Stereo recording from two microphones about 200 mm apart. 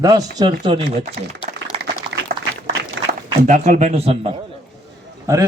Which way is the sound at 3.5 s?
40° right (ahead or behind).